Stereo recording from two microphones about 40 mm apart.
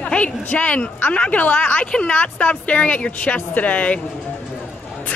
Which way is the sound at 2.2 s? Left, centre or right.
Left.